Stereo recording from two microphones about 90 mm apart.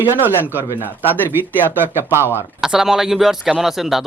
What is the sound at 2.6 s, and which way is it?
Speech, 5° right (ahead or behind).